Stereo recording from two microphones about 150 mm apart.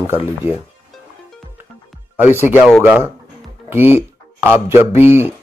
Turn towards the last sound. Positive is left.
turn(degrees=-15)  # may be behind; listen again after turning